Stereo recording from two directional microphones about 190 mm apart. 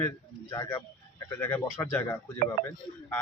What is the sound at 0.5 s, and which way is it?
A man's voice, 20° left (ahead or behind).